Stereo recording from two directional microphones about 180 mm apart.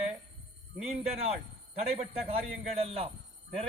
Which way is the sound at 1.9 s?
35° right (ahead or behind).